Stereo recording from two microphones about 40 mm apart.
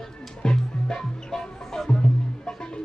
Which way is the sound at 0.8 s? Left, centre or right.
Centre.